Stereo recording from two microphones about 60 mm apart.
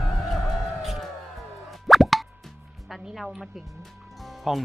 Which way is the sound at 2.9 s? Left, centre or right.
Centre.